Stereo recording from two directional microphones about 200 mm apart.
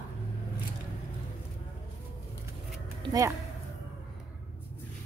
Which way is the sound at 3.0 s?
15° right (ahead or behind).